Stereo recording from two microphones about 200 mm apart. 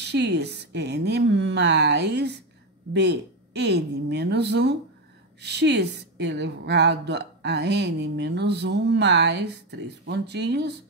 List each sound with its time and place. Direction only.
0.0 s a woman's voice: 60° right (ahead or behind)